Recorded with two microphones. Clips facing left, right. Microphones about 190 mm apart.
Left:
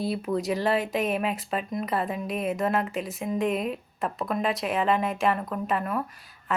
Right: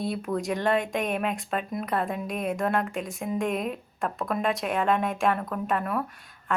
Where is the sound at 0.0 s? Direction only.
Centre (ahead or behind).